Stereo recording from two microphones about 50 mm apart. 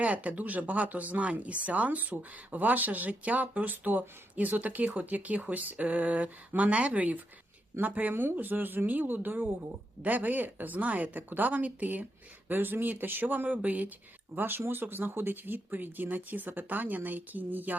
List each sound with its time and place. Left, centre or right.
0.0 s speech: right
14.3 s speech: right